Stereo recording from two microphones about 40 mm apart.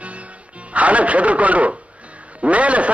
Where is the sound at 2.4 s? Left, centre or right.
Right.